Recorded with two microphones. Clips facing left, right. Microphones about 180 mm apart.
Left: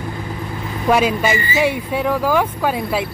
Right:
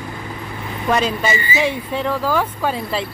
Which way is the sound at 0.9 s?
10° left (ahead or behind).